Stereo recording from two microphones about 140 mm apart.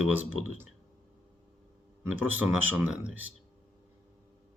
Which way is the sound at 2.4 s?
10° right (ahead or behind).